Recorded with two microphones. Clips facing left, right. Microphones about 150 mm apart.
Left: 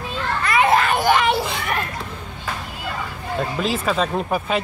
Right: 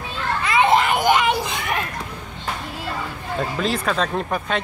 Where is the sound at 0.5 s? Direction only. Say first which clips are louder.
Even; 20° right (ahead or behind).